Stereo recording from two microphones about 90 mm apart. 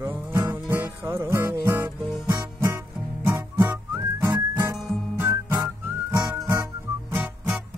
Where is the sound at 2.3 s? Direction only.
50° right (ahead or behind).